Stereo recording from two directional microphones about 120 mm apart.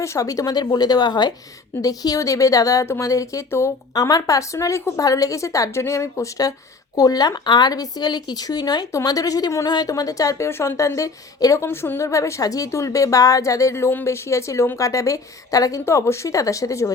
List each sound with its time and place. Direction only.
0.0 s speech: 25° left (ahead or behind)